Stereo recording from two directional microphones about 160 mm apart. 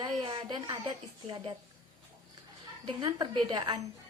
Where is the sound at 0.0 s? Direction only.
30° right (ahead or behind).